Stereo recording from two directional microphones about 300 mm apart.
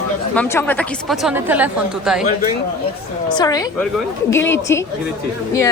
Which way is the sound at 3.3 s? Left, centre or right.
Centre.